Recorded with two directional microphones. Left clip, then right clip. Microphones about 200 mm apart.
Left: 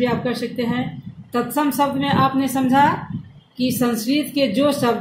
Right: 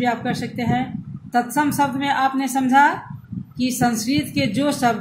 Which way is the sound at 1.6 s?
15° right (ahead or behind).